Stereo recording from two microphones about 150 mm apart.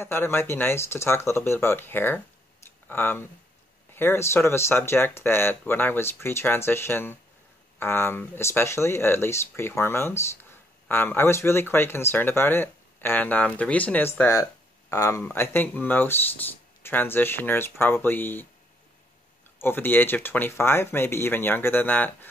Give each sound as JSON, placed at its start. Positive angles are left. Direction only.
{"t": 0.0, "sound": "speech", "side_deg": 15}
{"t": 19.6, "sound": "speech", "side_deg": 15}